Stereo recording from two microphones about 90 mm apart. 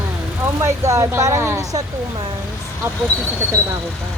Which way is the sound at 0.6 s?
35° right (ahead or behind).